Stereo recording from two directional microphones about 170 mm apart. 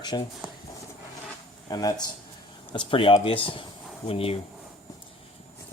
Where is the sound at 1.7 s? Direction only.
25° left (ahead or behind).